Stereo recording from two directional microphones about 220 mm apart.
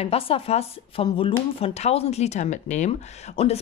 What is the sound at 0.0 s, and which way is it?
Speech, 25° left (ahead or behind).